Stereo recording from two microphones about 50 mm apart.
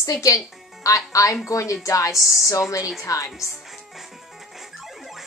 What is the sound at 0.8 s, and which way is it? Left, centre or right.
A woman's voice, left.